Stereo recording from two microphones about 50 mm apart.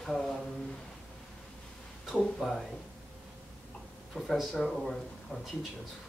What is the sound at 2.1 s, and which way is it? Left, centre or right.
Speech, centre.